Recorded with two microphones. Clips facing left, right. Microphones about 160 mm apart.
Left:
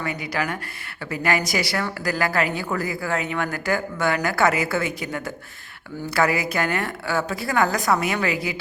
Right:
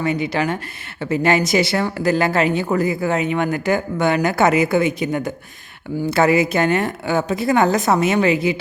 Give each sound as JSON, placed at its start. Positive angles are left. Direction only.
{"t": 0.0, "sound": "speech", "side_deg": -25}